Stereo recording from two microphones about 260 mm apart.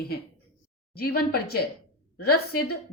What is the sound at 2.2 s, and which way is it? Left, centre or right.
Speech, left.